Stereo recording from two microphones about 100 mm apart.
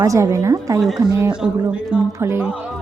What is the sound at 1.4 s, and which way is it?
Speech, 10° right (ahead or behind).